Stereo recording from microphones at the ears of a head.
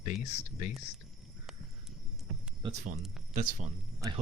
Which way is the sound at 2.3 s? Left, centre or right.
Right.